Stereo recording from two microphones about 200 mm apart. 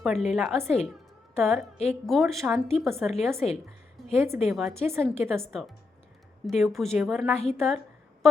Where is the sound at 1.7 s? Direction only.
35° left (ahead or behind).